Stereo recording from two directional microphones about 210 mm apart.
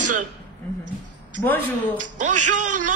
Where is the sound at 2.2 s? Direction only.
35° right (ahead or behind).